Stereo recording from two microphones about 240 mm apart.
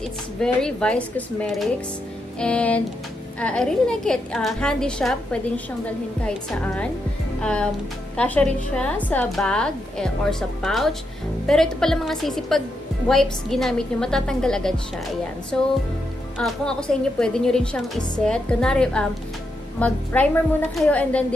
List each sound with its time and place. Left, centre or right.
0.4 s a woman's voice: centre